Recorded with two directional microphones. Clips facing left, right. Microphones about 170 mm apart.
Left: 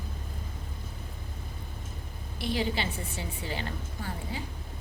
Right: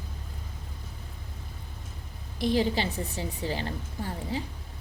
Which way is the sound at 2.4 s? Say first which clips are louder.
Right 5 dB; 40° right (ahead or behind).